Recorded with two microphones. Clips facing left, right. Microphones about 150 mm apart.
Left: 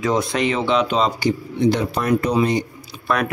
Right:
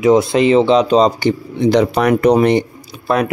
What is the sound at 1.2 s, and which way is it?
Speech, 90° right.